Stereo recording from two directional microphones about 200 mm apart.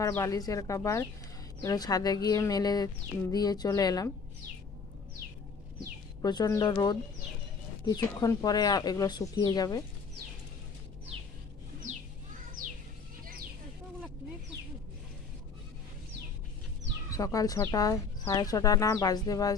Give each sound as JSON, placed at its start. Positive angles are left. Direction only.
{"t": 0.0, "sound": "speech", "side_deg": 15}
{"t": 6.2, "sound": "speech", "side_deg": 20}
{"t": 17.1, "sound": "speech", "side_deg": 15}